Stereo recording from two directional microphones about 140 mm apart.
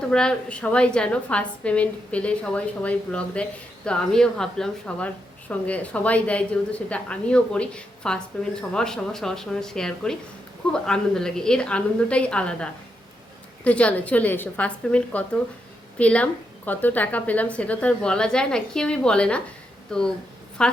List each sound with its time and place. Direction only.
0.1 s a woman's voice: 5° left (ahead or behind)